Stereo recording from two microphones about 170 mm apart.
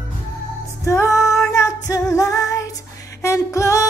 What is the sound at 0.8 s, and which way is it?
Female singing, 15° left (ahead or behind).